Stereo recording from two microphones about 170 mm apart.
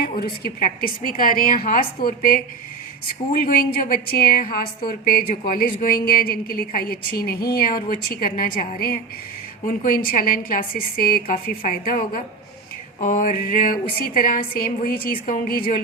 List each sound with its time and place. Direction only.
0.0 s a woman's voice: 65° left (ahead or behind)
3.4 s a woman's voice: 60° left (ahead or behind)
9.6 s a woman's voice: 60° left (ahead or behind)